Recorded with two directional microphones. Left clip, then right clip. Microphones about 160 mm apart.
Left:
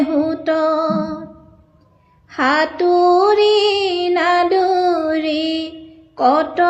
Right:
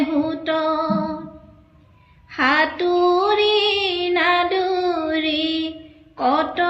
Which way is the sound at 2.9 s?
45° right (ahead or behind).